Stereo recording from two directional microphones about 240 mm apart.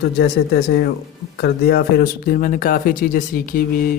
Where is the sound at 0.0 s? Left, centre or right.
Left.